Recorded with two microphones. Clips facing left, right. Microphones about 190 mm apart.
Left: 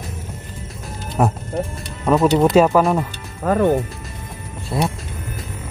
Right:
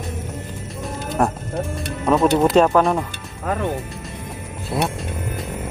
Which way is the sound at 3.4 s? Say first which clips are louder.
Left 7 dB; 45° left (ahead or behind).